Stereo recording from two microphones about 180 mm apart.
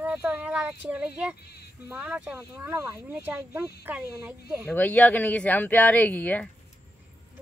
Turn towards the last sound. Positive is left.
turn(degrees=10)  # may be behind; listen again after turning